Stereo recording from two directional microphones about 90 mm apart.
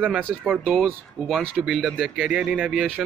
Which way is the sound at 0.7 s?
5° left (ahead or behind).